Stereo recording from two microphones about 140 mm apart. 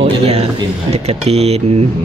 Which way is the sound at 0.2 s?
50° right (ahead or behind).